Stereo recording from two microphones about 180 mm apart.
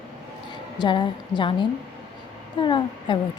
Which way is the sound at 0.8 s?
25° left (ahead or behind).